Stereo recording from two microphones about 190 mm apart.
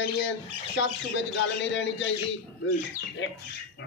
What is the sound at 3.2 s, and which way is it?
Speech, 80° left.